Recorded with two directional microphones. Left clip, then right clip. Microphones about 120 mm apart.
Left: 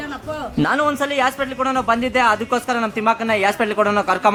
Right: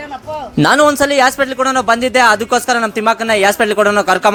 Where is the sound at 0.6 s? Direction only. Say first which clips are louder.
Right 9 dB; 55° right (ahead or behind).